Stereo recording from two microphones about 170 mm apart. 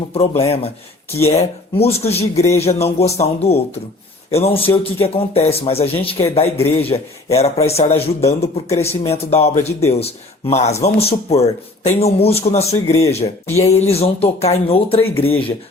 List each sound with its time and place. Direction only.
0.1 s speech: 35° left (ahead or behind)